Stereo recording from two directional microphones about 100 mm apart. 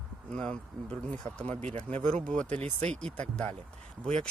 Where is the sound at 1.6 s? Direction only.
90° right.